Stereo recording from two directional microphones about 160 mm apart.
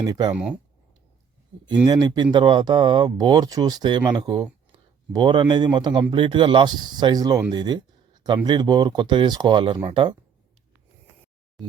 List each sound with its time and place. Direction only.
0.0 s speech: 25° right (ahead or behind)
0.3 s speech: 5° right (ahead or behind)
1.6 s speech: 30° right (ahead or behind)